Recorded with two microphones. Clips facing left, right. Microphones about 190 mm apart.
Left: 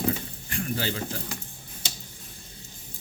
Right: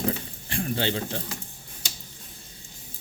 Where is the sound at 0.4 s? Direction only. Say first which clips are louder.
Right 3 dB; 30° right (ahead or behind).